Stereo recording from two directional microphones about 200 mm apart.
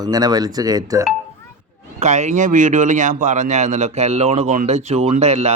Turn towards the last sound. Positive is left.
turn(degrees=-30)  # may be behind; listen again after turning